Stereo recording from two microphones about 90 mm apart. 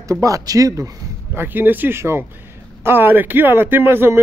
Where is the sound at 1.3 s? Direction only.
25° right (ahead or behind).